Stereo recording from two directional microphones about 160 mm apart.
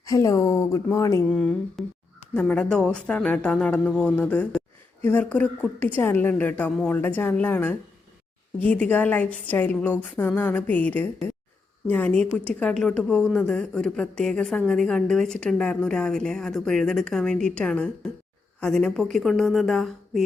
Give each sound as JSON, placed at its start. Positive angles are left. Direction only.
{"t": 0.0, "sound": "speech", "side_deg": 20}
{"t": 1.3, "sound": "a woman's voice", "side_deg": 5}